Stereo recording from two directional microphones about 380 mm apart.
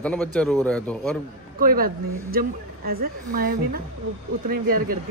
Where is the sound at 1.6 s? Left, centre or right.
Right.